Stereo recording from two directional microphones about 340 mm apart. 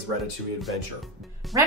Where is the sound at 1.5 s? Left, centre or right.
Centre.